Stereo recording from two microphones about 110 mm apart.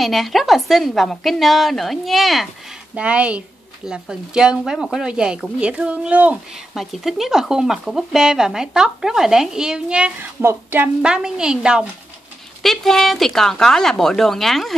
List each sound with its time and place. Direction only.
0.0 s a woman's voice: centre (ahead or behind)
10.4 s a woman's voice: 20° right (ahead or behind)
11.0 s a woman's voice: 5° right (ahead or behind)